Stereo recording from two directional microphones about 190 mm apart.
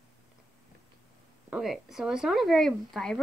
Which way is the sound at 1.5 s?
Centre (ahead or behind).